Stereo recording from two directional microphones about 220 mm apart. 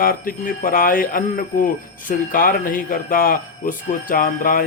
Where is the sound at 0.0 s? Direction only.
40° left (ahead or behind).